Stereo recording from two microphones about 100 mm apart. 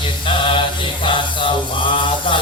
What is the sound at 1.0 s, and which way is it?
Mantra, 55° left (ahead or behind).